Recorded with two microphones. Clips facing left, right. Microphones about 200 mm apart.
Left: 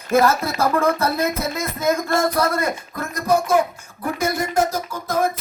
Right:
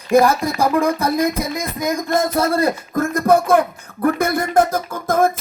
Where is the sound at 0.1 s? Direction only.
15° right (ahead or behind); by 2.7 s 30° right (ahead or behind).